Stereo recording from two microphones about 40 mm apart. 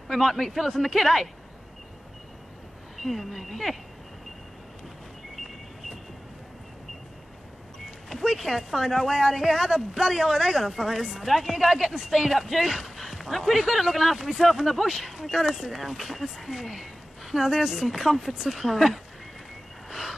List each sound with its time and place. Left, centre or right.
0.1 s speech: centre
3.0 s speech: centre
8.1 s speech: centre
12.3 s speech: centre
17.8 s speech: centre
19.9 s a sound: centre